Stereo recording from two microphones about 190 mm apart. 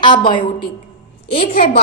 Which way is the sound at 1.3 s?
35° left (ahead or behind).